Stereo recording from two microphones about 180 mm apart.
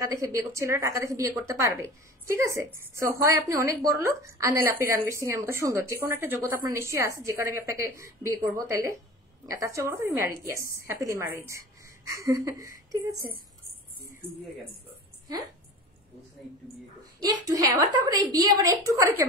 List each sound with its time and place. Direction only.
0.0 s a woman's voice: 15° right (ahead or behind)
17.5 s a woman's voice: 20° right (ahead or behind)